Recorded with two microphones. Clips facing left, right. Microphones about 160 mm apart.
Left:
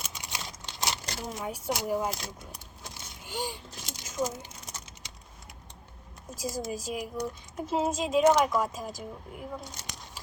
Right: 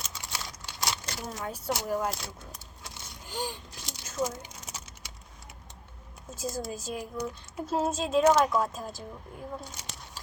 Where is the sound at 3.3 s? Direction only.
10° left (ahead or behind).